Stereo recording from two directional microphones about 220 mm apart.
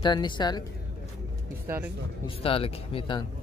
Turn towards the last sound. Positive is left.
turn(degrees=20)  # may be behind; listen again after turning